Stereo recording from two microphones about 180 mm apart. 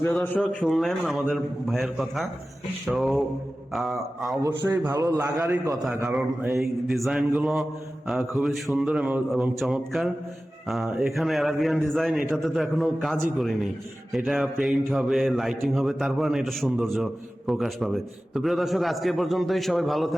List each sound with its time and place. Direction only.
0.1 s a man's voice: centre (ahead or behind)
4.4 s a man's voice: 15° right (ahead or behind)
6.1 s a man's voice: centre (ahead or behind)